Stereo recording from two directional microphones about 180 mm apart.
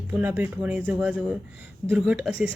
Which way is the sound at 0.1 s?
10° right (ahead or behind).